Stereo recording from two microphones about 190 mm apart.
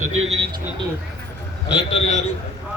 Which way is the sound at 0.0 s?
90° right.